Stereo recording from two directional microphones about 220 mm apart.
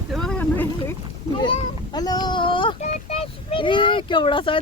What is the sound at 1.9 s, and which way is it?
Speech, 20° left (ahead or behind).